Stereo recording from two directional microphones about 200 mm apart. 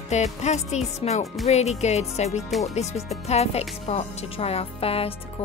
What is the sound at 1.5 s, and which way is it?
Speech, 35° left (ahead or behind).